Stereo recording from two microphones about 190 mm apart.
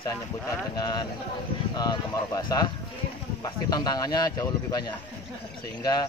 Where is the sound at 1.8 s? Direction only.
20° left (ahead or behind).